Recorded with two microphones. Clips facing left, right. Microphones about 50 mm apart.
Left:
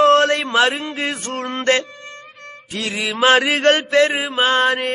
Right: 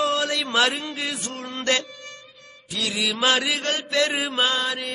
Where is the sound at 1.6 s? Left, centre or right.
Left.